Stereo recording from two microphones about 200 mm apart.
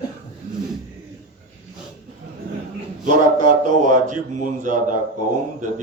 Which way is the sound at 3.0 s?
40° right (ahead or behind).